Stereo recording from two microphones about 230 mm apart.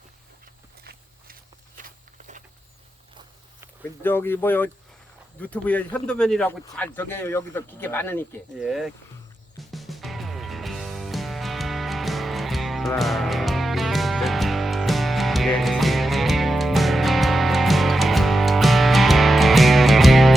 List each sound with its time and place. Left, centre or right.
1.8 s walk: right
4.0 s speech: centre
8.5 s speech: centre
9.6 s music: centre